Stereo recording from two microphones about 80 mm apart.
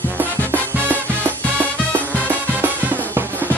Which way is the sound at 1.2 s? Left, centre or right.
Right.